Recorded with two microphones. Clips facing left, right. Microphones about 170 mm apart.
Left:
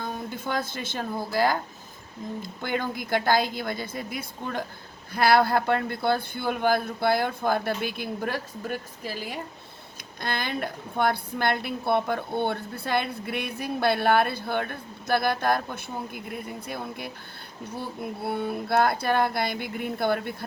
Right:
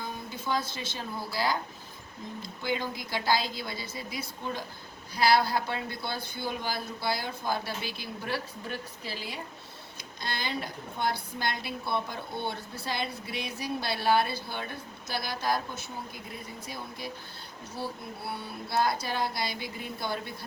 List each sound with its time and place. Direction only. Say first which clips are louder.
0.0 s speech: left 5 dB; 55° left (ahead or behind)
2.6 s a woman's voice: left 2 dB; 55° left (ahead or behind)
18.2 s a woman's voice: left 11 dB; 55° left (ahead or behind)